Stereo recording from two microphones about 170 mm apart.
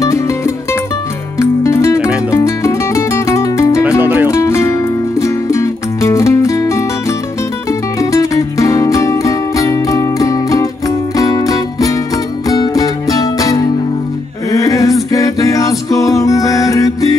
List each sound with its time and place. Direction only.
1.4 s music: 15° left (ahead or behind)
4.0 s music: 10° right (ahead or behind)
4.3 s music: 15° left (ahead or behind)
14.5 s a capella: 20° left (ahead or behind)
15.0 s music: 20° left (ahead or behind)